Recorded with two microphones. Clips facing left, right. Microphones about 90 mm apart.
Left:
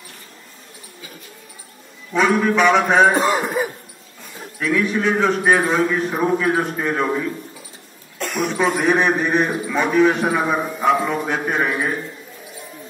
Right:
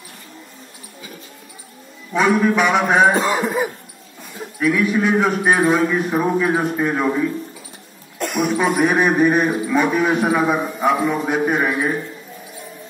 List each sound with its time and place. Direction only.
2.1 s a man's voice: 5° right (ahead or behind)
4.6 s a man's voice: 10° right (ahead or behind)